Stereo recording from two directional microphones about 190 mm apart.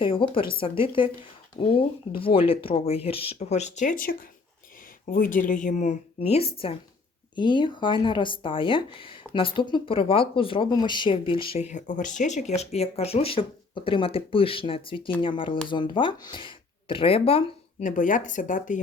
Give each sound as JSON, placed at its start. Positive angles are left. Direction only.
{"t": 0.0, "sound": "speech", "side_deg": 25}
{"t": 5.1, "sound": "speech", "side_deg": 45}
{"t": 17.8, "sound": "speech", "side_deg": 45}